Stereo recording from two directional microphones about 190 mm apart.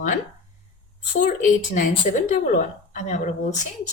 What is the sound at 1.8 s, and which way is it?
A woman's voice, 45° left (ahead or behind).